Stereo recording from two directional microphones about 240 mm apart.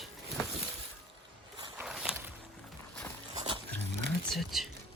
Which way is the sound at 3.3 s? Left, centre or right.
Centre.